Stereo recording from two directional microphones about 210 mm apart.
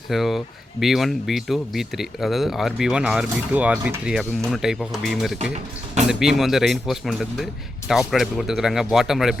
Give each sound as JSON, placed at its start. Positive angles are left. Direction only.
{"t": 0.1, "sound": "speech", "side_deg": 0}